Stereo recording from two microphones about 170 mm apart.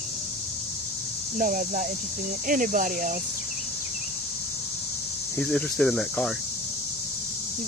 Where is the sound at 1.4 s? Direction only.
55° right (ahead or behind).